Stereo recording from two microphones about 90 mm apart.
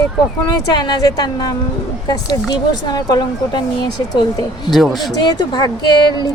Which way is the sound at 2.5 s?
50° left (ahead or behind).